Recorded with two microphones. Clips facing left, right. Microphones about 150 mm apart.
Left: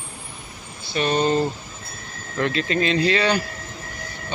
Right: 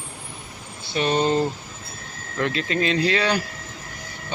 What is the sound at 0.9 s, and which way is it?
Speech, 20° right (ahead or behind).